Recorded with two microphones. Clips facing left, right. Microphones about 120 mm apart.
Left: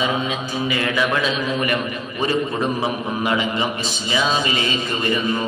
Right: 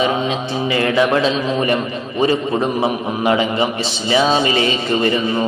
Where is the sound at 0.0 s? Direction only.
30° right (ahead or behind).